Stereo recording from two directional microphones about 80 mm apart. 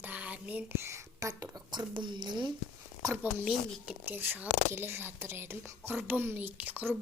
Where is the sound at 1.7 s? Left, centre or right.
Right.